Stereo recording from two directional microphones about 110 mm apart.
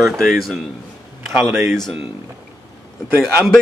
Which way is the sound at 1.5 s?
20° right (ahead or behind).